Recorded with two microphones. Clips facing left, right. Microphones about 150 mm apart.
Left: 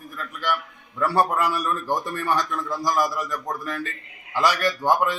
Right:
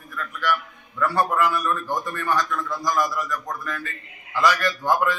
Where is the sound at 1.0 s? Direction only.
30° left (ahead or behind).